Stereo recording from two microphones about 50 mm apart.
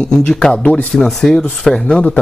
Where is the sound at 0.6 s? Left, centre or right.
Left.